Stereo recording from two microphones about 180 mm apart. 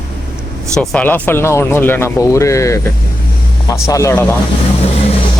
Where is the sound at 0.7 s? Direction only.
10° left (ahead or behind).